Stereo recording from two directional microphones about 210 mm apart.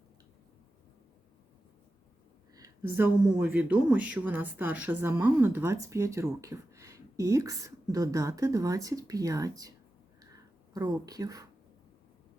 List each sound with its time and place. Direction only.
2.6 s a woman's voice: 10° right (ahead or behind)